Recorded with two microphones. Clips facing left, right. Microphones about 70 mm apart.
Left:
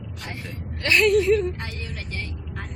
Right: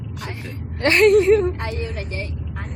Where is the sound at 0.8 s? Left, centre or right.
Right.